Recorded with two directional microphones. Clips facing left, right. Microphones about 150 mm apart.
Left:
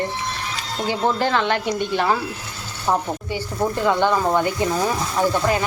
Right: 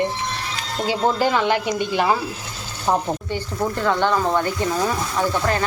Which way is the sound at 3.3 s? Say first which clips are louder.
Left 1 dB; 10° left (ahead or behind).